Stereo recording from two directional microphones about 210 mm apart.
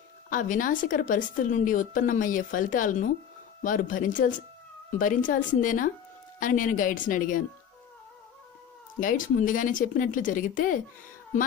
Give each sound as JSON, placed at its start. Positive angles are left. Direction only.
{"t": 0.3, "sound": "a woman's voice", "side_deg": 40}
{"t": 9.0, "sound": "a woman's voice", "side_deg": 40}